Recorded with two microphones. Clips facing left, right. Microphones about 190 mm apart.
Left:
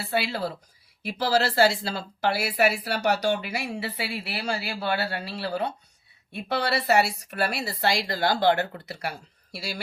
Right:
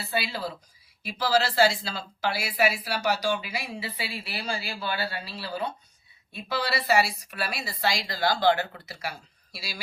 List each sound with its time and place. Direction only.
0.1 s speech: 60° left (ahead or behind)